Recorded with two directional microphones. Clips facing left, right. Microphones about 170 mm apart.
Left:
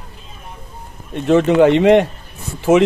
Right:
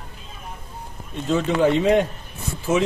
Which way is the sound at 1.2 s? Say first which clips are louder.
Left 8 dB; 70° left (ahead or behind).